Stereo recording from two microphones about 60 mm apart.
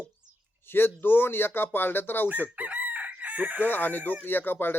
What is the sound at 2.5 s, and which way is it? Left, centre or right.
Chicken, right.